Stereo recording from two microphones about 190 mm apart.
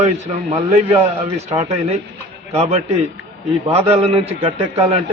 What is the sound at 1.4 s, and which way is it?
Speech, 35° right (ahead or behind).